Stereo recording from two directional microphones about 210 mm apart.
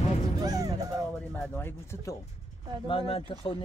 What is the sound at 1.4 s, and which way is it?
Speech, 10° left (ahead or behind).